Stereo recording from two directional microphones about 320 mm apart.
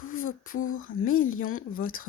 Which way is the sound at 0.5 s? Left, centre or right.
Left.